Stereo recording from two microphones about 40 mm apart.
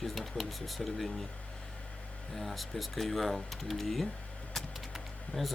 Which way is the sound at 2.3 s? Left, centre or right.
Centre.